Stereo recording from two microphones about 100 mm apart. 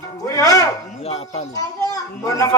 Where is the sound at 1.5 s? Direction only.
35° left (ahead or behind).